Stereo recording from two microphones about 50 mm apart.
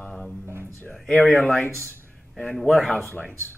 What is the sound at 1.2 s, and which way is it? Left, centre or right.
Speech, left.